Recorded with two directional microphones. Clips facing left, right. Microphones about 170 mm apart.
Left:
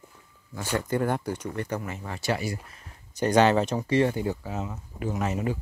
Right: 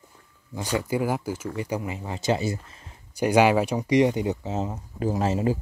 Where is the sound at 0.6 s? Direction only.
10° right (ahead or behind).